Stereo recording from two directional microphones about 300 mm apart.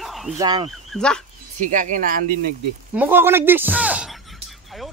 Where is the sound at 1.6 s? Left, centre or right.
Right.